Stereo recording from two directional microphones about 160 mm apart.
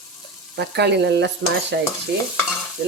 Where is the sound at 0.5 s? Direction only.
90° right.